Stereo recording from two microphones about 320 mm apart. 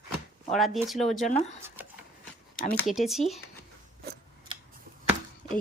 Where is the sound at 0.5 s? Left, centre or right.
Centre.